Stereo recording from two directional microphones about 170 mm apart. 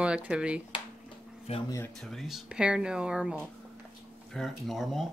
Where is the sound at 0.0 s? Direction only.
5° right (ahead or behind).